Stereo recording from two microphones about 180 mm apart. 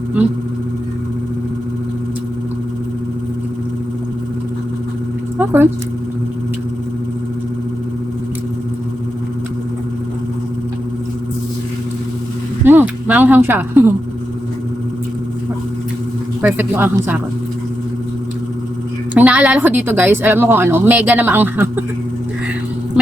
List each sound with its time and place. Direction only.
5.4 s speech: 10° right (ahead or behind)
12.6 s a sound: 10° right (ahead or behind)
16.4 s a woman's voice: 10° right (ahead or behind)
19.1 s a woman's voice: 5° right (ahead or behind)